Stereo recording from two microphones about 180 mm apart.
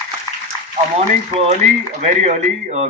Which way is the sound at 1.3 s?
35° right (ahead or behind).